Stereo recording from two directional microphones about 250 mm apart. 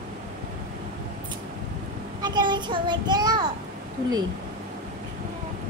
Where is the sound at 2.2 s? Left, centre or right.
Centre.